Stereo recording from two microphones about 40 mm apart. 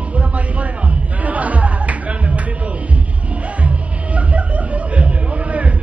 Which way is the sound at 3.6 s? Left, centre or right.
Right.